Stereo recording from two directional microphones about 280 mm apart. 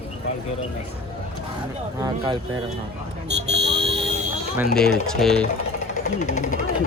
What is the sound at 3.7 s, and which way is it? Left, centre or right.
Buzzer, centre.